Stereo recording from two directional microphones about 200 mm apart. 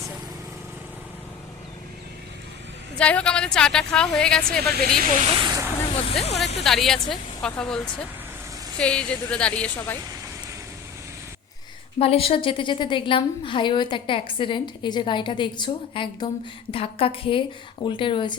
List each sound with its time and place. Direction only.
3.0 s a woman's voice: 5° left (ahead or behind)
4.9 s speech: 40° right (ahead or behind)
5.3 s speech: 20° right (ahead or behind)
6.0 s speech: 30° left (ahead or behind)
6.6 s a woman's voice: centre (ahead or behind)
8.8 s a woman's voice: 5° left (ahead or behind)
11.9 s a woman's voice: 30° left (ahead or behind)